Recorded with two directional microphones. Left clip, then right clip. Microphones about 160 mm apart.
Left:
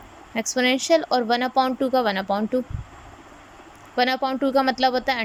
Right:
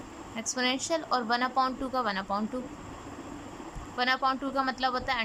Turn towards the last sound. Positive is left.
turn(degrees=30)  # may be behind; listen again after turning